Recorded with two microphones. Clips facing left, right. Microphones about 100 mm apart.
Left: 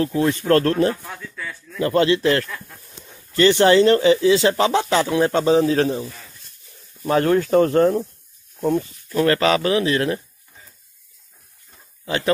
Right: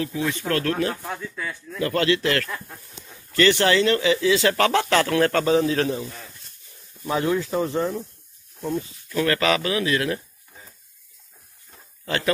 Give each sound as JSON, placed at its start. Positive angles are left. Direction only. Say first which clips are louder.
{"t": 0.0, "sound": "speech", "louder": "left 6 dB", "side_deg": 40}
{"t": 1.8, "sound": "speech", "louder": "left 4 dB", "side_deg": 25}
{"t": 7.1, "sound": "speech", "louder": "left 6 dB", "side_deg": 55}
{"t": 8.5, "sound": "speech", "louder": "left 7 dB", "side_deg": 75}
{"t": 9.1, "sound": "speech", "louder": "left 4 dB", "side_deg": 35}